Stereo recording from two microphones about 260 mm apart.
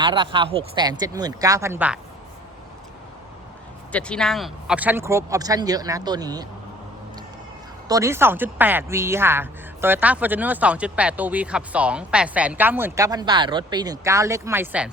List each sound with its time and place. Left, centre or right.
0.0 s speech: centre
3.9 s speech: centre
7.9 s speech: centre